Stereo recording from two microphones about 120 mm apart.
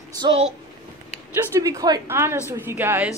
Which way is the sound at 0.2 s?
50° right (ahead or behind).